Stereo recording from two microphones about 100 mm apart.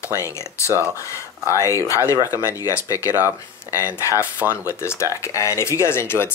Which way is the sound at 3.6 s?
20° right (ahead or behind).